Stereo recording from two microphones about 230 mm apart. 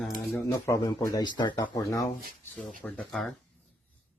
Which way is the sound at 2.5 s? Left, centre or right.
Centre.